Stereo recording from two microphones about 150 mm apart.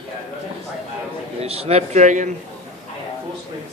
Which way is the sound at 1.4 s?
40° right (ahead or behind).